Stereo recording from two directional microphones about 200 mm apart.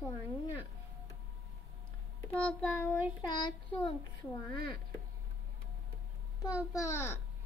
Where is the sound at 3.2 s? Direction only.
20° left (ahead or behind).